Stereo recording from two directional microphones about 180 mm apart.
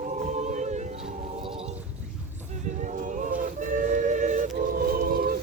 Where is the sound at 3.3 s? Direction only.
45° right (ahead or behind).